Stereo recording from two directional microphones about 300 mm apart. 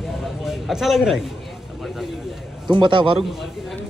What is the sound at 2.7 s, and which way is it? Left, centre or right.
Speech, centre.